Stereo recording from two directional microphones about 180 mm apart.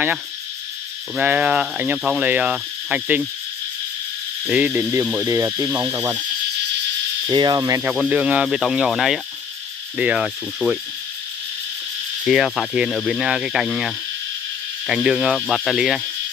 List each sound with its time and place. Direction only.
1.1 s speech: 10° right (ahead or behind)
4.5 s speech: 10° right (ahead or behind)
7.2 s cricket: 25° right (ahead or behind)
7.9 s speech: 5° right (ahead or behind)
12.3 s speech: centre (ahead or behind)